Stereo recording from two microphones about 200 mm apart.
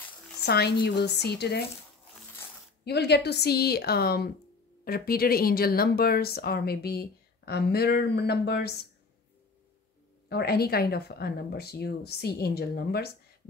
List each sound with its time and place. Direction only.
0.5 s a woman's voice: 55° left (ahead or behind)
2.8 s a woman's voice: 55° left (ahead or behind)
10.3 s a woman's voice: 50° left (ahead or behind)